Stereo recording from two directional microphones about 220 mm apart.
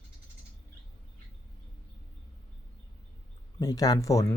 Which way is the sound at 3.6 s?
15° left (ahead or behind).